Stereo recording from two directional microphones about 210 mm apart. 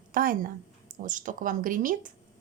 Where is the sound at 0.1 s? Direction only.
40° right (ahead or behind).